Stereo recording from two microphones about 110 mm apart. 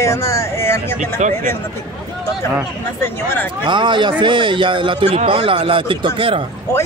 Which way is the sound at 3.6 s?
45° right (ahead or behind).